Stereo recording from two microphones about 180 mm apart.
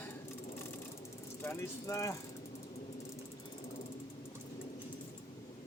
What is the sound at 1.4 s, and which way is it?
Speech, 15° left (ahead or behind).